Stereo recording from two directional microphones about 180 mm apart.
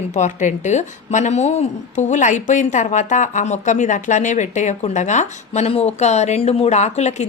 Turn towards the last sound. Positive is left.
turn(degrees=40)  # may be behind; listen again after turning